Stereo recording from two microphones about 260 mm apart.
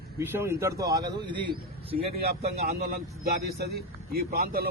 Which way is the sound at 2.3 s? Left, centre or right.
Right.